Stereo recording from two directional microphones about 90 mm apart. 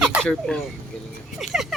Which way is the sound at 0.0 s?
10° right (ahead or behind).